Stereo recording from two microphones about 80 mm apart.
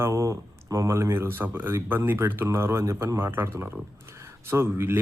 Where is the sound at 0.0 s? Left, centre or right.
Right.